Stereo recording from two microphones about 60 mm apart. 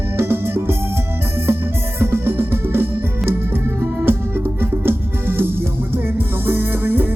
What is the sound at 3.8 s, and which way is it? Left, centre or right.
Organ, right.